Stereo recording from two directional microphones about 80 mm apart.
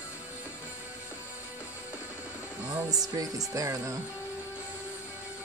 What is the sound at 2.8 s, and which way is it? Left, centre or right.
Music, right.